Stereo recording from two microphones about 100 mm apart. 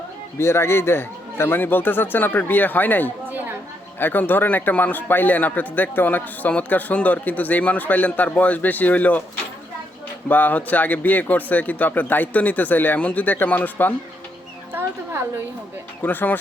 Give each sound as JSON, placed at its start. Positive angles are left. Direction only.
{"t": 0.3, "sound": "speech", "side_deg": 25}
{"t": 10.2, "sound": "speech", "side_deg": 15}
{"t": 16.0, "sound": "speech", "side_deg": 20}